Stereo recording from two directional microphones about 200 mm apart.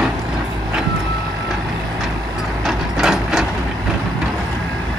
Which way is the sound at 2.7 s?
Centre (ahead or behind).